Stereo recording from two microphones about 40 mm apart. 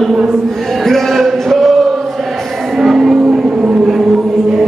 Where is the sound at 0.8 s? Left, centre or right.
Centre.